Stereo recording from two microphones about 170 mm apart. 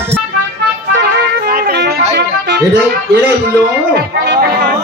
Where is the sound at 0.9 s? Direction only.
65° right (ahead or behind).